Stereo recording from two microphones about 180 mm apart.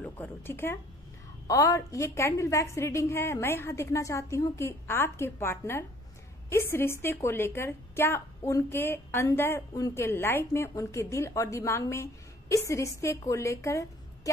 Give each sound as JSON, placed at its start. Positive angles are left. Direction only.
{"t": 0.0, "sound": "a woman's voice", "side_deg": 10}